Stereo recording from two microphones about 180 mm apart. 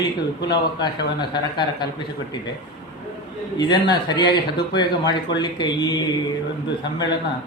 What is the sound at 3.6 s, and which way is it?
A man's voice, 25° left (ahead or behind).